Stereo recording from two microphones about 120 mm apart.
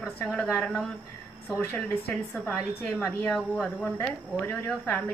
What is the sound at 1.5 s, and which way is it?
A woman's voice, 25° left (ahead or behind).